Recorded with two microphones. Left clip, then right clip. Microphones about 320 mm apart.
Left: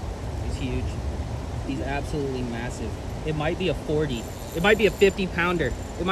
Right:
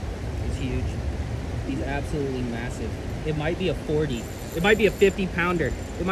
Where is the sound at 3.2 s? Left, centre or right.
Centre.